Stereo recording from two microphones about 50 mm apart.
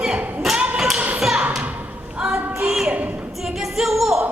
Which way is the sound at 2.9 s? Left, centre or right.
Right.